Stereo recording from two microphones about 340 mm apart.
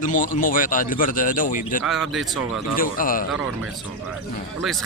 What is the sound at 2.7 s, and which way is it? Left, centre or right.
Speech, left.